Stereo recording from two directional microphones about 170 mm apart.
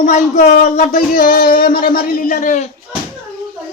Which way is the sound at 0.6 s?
45° left (ahead or behind).